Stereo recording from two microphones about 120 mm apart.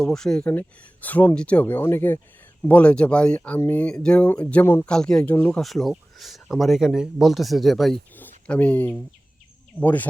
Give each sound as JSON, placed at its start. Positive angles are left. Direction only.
{"t": 0.0, "sound": "speech", "side_deg": 5}
{"t": 3.8, "sound": "speech", "side_deg": 10}
{"t": 4.9, "sound": "speech", "side_deg": 5}
{"t": 5.6, "sound": "speech", "side_deg": 0}
{"t": 8.1, "sound": "a sound", "side_deg": 15}
{"t": 9.8, "sound": "speech", "side_deg": 15}